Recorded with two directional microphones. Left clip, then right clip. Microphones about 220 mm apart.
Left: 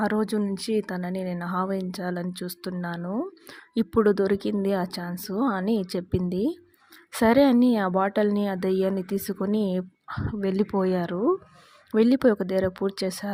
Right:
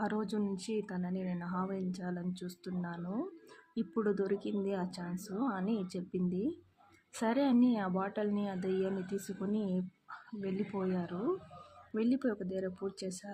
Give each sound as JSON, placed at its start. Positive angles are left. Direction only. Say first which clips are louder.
{"t": 0.0, "sound": "a woman's voice", "louder": "left 11 dB", "side_deg": 40}